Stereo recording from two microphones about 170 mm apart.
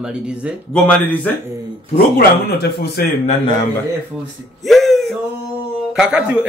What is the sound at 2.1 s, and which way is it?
Speech, 65° left (ahead or behind).